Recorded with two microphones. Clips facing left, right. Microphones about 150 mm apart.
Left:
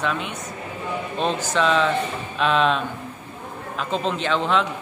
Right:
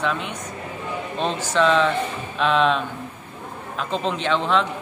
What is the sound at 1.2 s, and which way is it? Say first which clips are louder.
Speech: right 1 dB; 5° left (ahead or behind).